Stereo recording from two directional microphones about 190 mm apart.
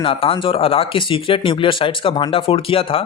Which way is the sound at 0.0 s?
30° left (ahead or behind).